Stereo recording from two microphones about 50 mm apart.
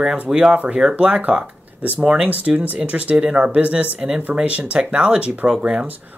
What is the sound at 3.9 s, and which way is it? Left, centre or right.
Speech, centre.